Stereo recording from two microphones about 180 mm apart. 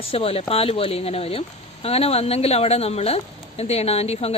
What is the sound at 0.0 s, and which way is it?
Speech, 30° left (ahead or behind).